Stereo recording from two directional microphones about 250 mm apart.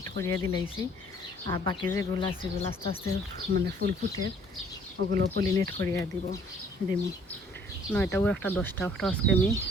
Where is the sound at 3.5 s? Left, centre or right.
Right.